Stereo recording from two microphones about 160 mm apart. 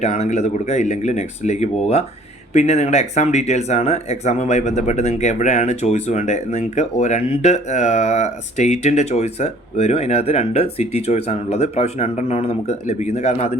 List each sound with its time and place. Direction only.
0.0 s speech: 45° left (ahead or behind)